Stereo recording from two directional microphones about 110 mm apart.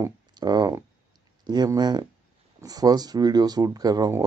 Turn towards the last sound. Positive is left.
turn(degrees=-30)  # may be behind; listen again after turning